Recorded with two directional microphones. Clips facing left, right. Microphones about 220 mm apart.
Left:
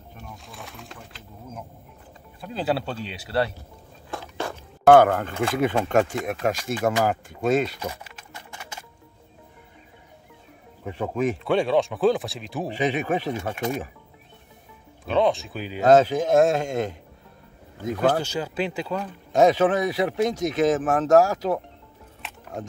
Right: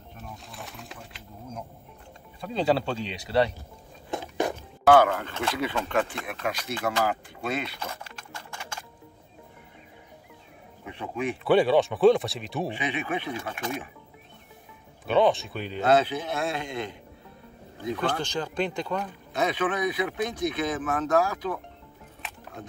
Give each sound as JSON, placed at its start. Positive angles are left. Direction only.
{"t": 0.2, "sound": "sewing machine", "side_deg": 0}
{"t": 2.4, "sound": "speech", "side_deg": 5}
{"t": 4.1, "sound": "biting", "side_deg": -15}
{"t": 4.8, "sound": "speech", "side_deg": 50}
{"t": 7.9, "sound": "music", "side_deg": 20}
{"t": 10.9, "sound": "speech", "side_deg": 40}
{"t": 11.4, "sound": "speech", "side_deg": -5}
{"t": 12.7, "sound": "speech", "side_deg": 40}
{"t": 15.0, "sound": "speech", "side_deg": 0}
{"t": 15.8, "sound": "speech", "side_deg": 45}
{"t": 18.2, "sound": "speech", "side_deg": 10}
{"t": 19.3, "sound": "speech", "side_deg": 40}